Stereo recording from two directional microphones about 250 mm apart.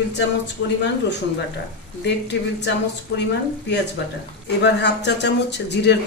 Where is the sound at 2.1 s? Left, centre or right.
Left.